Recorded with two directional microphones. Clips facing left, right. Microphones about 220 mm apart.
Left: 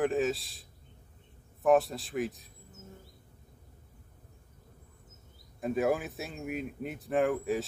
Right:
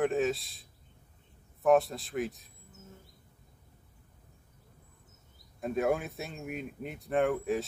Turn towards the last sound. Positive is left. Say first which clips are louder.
# even
turn(degrees=0)  # may be behind; listen again after turning